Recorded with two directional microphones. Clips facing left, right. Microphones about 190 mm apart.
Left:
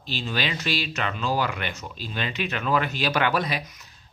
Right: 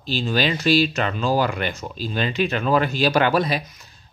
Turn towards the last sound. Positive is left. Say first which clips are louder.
# right 5 dB
turn(degrees=-35)  # may be behind; listen again after turning